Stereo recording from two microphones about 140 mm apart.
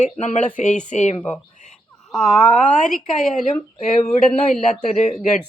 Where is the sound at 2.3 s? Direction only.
5° left (ahead or behind).